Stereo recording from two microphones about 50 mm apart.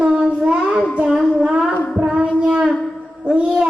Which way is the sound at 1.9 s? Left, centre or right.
Centre.